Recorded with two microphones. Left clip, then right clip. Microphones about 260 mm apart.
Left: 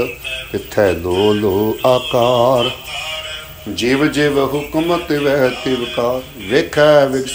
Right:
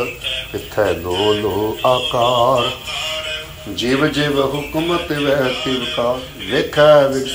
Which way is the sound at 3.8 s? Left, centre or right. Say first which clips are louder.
Left 2 dB; centre.